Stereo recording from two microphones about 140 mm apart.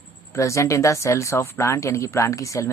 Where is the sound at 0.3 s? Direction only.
20° left (ahead or behind).